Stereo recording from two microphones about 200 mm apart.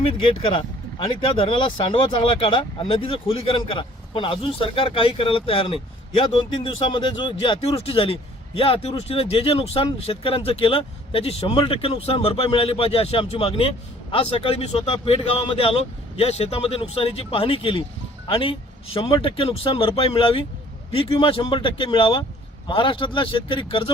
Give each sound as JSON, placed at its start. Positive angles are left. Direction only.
{"t": 0.0, "sound": "speech", "side_deg": 25}